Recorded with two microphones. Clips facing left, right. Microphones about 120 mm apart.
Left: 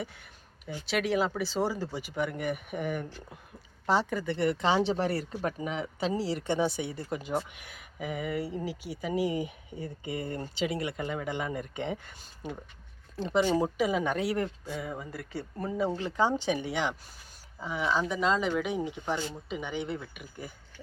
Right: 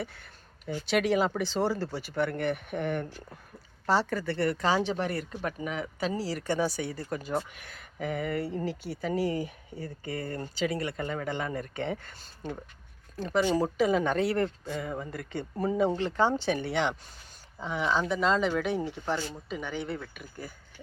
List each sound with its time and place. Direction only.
0.0 s a sound: 15° left (ahead or behind)
0.9 s speech: centre (ahead or behind); by 13.4 s 25° left (ahead or behind)
13.4 s speech: 10° left (ahead or behind)